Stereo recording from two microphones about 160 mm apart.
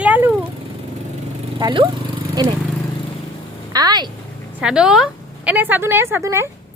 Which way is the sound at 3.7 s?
25° right (ahead or behind).